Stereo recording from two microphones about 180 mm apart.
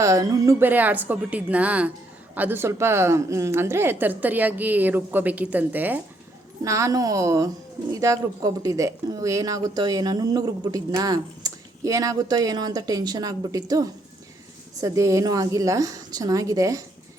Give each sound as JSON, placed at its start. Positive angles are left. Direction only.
{"t": 0.0, "sound": "a woman's voice", "side_deg": -20}